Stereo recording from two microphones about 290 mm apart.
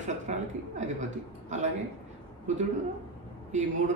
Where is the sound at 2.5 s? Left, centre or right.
Right.